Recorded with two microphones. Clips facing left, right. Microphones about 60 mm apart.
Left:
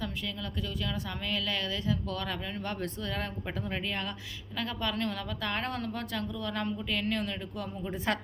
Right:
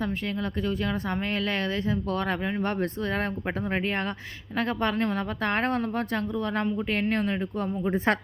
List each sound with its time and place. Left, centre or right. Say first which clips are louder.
1.3 s a woman's voice: right 3 dB; right
4.5 s a woman's voice: right 7 dB; right